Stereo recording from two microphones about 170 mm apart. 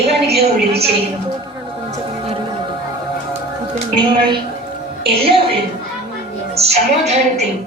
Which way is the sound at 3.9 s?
30° right (ahead or behind).